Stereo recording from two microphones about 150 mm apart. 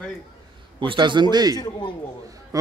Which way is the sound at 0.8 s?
30° right (ahead or behind).